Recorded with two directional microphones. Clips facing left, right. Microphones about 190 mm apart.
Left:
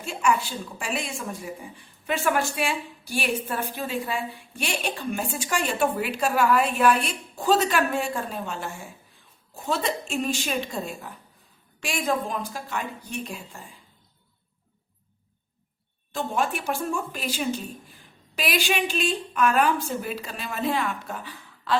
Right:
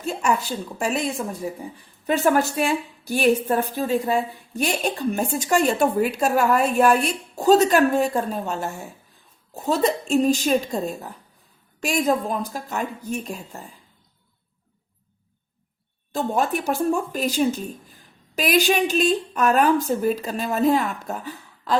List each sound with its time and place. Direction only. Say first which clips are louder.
0.0 s a woman's voice: right 2 dB; 40° right (ahead or behind)
16.1 s a woman's voice: right 4 dB; 40° right (ahead or behind)